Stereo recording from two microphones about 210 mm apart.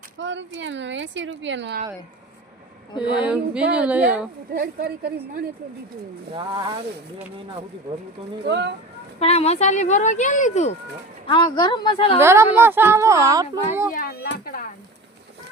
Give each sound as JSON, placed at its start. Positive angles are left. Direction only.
{"t": 0.2, "sound": "speech", "side_deg": -60}
{"t": 3.1, "sound": "speech", "side_deg": -5}
{"t": 4.5, "sound": "a woman's voice", "side_deg": -45}
{"t": 6.3, "sound": "speech", "side_deg": -20}
{"t": 8.4, "sound": "speech", "side_deg": -55}
{"t": 9.1, "sound": "speech", "side_deg": 30}
{"t": 11.3, "sound": "a woman's voice", "side_deg": 20}
{"t": 12.2, "sound": "speech", "side_deg": -10}
{"t": 13.9, "sound": "speech", "side_deg": 45}